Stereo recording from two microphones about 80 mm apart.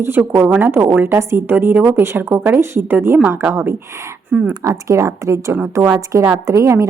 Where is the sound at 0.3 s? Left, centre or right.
Right.